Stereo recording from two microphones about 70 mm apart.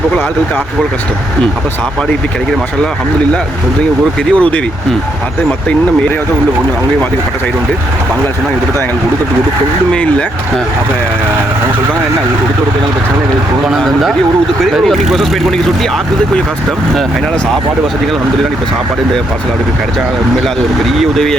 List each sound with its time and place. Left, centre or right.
4.3 s speech: centre
9.9 s speech: centre
13.7 s speech: centre
20.9 s speech: centre